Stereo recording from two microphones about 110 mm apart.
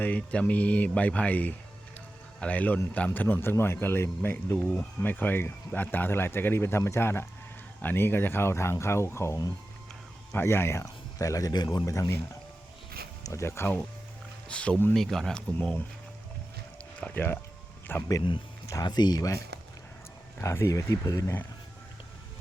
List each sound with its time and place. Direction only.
0.0 s speech: 10° left (ahead or behind)
13.2 s speech: 25° left (ahead or behind)
14.4 s speech: 10° left (ahead or behind)
14.9 s speech: 5° left (ahead or behind)
17.0 s speech: 15° left (ahead or behind)
18.7 s speech: 40° left (ahead or behind)
20.4 s speech: 25° left (ahead or behind)